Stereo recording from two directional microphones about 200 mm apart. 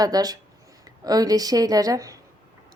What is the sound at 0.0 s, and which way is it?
A woman's voice, 20° right (ahead or behind).